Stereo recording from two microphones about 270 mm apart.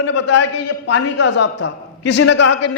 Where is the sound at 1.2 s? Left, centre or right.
Left.